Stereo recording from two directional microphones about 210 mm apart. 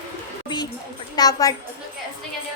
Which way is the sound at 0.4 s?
20° left (ahead or behind).